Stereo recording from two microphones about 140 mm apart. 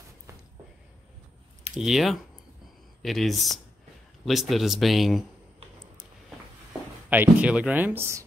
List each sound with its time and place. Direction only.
1.8 s speech: centre (ahead or behind)
7.1 s speech: 10° right (ahead or behind)